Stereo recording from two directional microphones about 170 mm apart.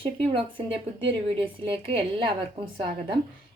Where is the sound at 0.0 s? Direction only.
30° right (ahead or behind).